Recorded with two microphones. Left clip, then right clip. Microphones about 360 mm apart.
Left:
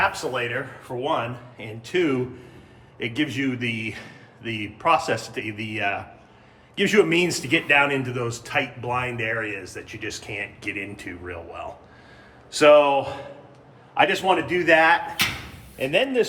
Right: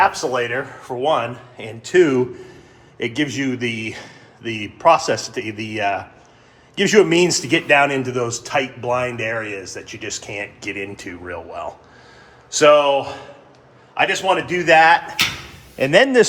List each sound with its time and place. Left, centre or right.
0.8 s speech: centre
15.8 s speech: centre